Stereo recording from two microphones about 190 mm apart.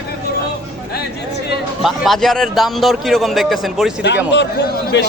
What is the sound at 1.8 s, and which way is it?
A man's voice, centre (ahead or behind).